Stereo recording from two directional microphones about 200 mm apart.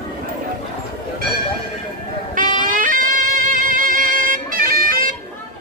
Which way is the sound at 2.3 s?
40° right (ahead or behind).